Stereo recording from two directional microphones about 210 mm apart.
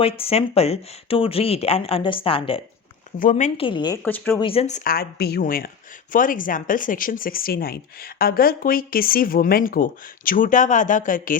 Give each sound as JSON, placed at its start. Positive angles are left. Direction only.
{"t": 0.2, "sound": "speech", "side_deg": 30}
{"t": 3.2, "sound": "speech", "side_deg": 35}
{"t": 3.7, "sound": "speech", "side_deg": 20}
{"t": 4.0, "sound": "speech", "side_deg": 10}
{"t": 4.4, "sound": "speech", "side_deg": 25}